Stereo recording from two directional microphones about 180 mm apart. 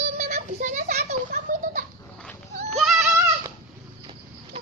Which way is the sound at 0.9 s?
55° right (ahead or behind).